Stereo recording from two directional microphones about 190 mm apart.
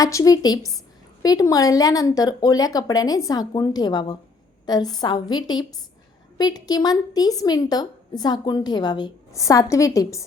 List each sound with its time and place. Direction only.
0.0 s a woman's voice: 15° left (ahead or behind)